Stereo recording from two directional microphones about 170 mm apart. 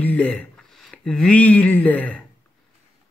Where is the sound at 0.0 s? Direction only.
10° left (ahead or behind).